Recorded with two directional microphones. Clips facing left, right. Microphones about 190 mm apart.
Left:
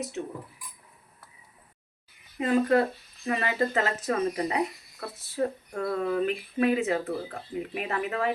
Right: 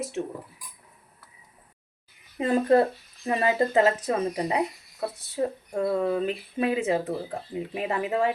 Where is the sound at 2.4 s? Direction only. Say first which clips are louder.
Right 2 dB; 30° right (ahead or behind).